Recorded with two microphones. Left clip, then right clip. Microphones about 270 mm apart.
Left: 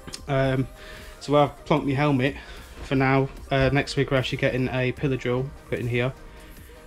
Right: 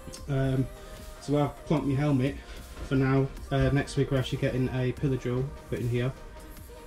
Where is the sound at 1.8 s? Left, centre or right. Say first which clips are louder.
Left 5 dB; centre.